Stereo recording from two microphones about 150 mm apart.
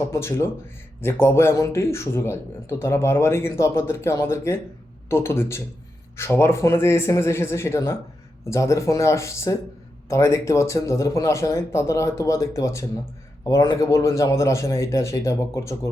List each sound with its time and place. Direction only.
0.1 s speech: 15° left (ahead or behind)